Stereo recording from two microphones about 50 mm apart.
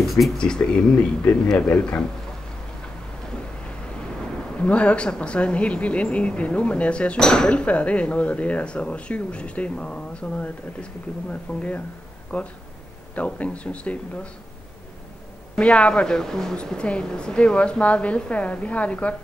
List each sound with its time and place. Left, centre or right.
0.4 s speech: centre
4.6 s speech: left
15.6 s speech: left
16.6 s speech: centre